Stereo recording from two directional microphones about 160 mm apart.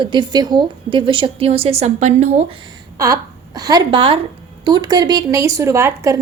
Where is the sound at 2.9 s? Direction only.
20° right (ahead or behind).